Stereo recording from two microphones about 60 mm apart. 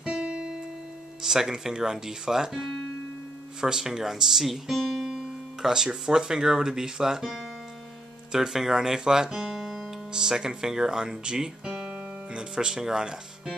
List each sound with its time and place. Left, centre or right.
0.0 s music: centre
1.2 s speech: centre